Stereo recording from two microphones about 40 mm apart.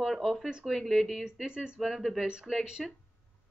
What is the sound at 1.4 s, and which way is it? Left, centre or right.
Speech, right.